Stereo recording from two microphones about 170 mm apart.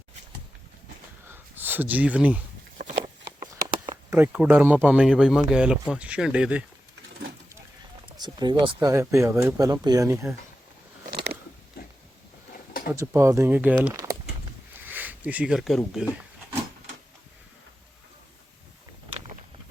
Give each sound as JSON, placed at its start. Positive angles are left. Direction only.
{"t": 1.3, "sound": "a sound", "side_deg": -10}
{"t": 4.1, "sound": "speech", "side_deg": -10}
{"t": 8.2, "sound": "speech", "side_deg": -25}
{"t": 11.1, "sound": "biting", "side_deg": -75}
{"t": 12.9, "sound": "speech", "side_deg": -15}
{"t": 13.9, "sound": "a sound", "side_deg": -20}